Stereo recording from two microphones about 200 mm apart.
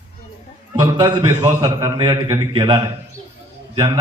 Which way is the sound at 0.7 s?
20° right (ahead or behind).